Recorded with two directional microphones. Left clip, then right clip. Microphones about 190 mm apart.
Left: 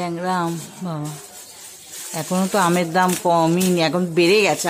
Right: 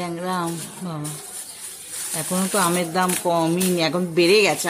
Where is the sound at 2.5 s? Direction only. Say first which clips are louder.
Left 3 dB; 15° left (ahead or behind).